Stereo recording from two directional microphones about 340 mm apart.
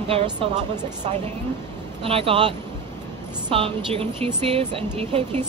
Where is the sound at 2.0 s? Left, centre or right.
Centre.